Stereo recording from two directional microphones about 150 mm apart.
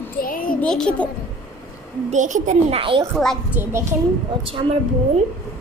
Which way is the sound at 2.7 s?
35° right (ahead or behind).